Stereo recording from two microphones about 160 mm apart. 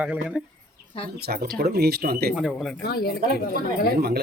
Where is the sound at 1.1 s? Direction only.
80° right.